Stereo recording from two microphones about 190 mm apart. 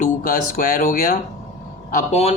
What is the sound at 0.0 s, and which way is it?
Speech, 45° left (ahead or behind).